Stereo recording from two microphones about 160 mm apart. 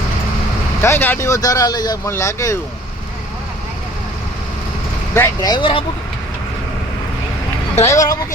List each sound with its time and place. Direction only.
0.8 s speech: 15° left (ahead or behind)
5.1 s speech: 15° left (ahead or behind)
5.5 s speech: 30° left (ahead or behind)
7.9 s speech: 20° left (ahead or behind)